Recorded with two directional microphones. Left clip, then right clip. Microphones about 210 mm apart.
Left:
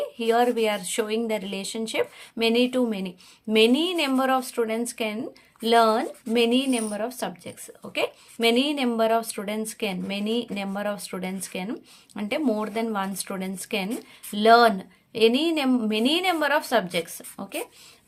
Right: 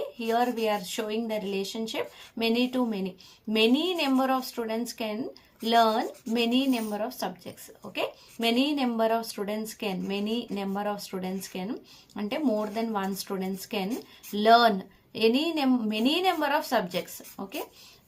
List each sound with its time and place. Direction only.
0.2 s a woman's voice: 35° left (ahead or behind)